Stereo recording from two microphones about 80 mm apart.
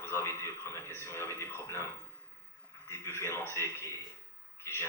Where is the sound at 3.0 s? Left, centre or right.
Left.